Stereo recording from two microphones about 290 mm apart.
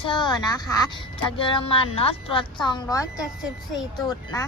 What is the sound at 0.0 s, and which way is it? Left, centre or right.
Speech, centre.